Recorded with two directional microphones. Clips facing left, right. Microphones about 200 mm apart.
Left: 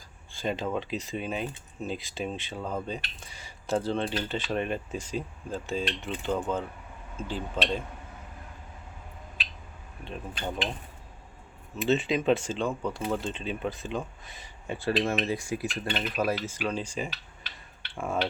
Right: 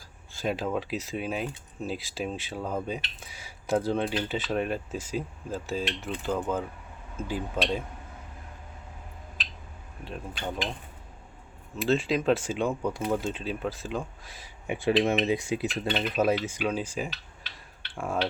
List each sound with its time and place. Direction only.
0.4 s speech: 5° right (ahead or behind)
10.0 s speech: 5° right (ahead or behind)
11.8 s speech: centre (ahead or behind)
14.7 s speech: 15° right (ahead or behind)
16.6 s speech: 5° right (ahead or behind)